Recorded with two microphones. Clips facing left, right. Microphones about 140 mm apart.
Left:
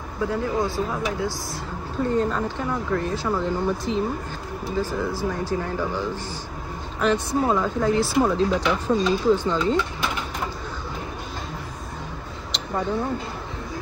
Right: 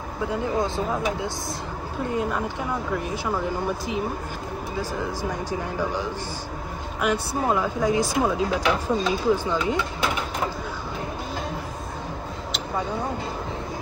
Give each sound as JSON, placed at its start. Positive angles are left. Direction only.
{"t": 0.3, "sound": "speech", "side_deg": -20}